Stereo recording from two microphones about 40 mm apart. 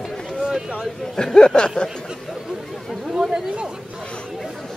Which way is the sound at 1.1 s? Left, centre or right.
Centre.